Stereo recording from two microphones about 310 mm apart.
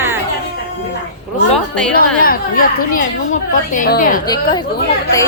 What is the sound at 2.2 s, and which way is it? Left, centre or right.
A woman's voice, left.